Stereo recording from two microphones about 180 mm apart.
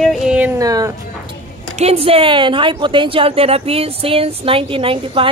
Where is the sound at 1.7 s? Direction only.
35° right (ahead or behind).